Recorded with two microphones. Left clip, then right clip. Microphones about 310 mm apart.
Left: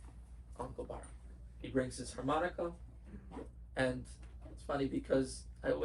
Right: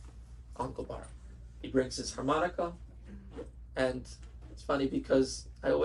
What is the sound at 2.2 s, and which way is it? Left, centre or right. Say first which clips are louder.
Speech: right 6 dB; right.